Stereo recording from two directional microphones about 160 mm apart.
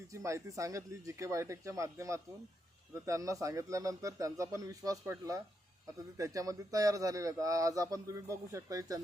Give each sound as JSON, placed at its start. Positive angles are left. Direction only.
{"t": 0.1, "sound": "a man's voice", "side_deg": -20}